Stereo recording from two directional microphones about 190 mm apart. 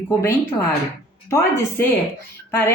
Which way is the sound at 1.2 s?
15° left (ahead or behind).